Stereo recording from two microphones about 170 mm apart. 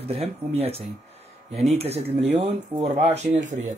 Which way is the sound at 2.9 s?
40° right (ahead or behind).